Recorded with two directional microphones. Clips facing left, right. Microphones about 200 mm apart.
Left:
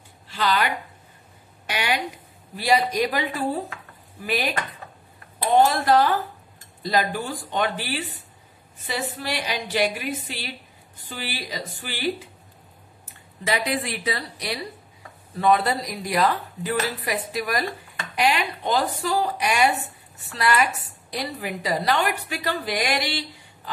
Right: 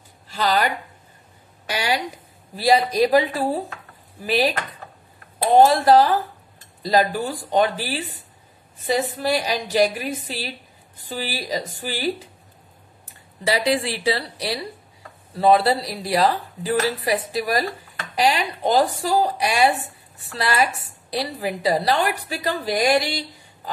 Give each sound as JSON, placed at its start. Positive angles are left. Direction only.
{"t": 0.3, "sound": "speech", "side_deg": -40}
{"t": 1.7, "sound": "a woman's voice", "side_deg": -35}
{"t": 5.9, "sound": "a woman's voice", "side_deg": -35}
{"t": 13.5, "sound": "a woman's voice", "side_deg": -30}